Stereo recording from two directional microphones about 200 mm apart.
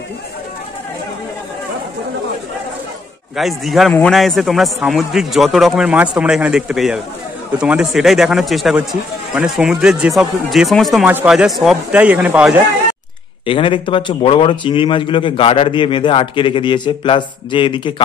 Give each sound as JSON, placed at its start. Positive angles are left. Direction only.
{"t": 3.3, "sound": "a man's voice", "side_deg": 0}
{"t": 13.5, "sound": "a man's voice", "side_deg": 25}